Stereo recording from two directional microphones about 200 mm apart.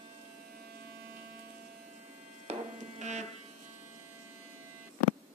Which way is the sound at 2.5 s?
35° right (ahead or behind).